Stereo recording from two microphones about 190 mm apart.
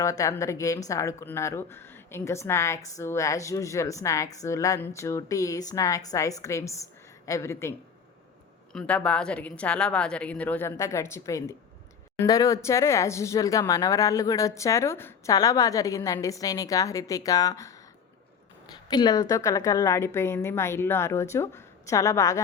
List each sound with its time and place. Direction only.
0.0 s speech: 15° left (ahead or behind)
8.7 s speech: 5° left (ahead or behind)
18.9 s speech: 20° left (ahead or behind)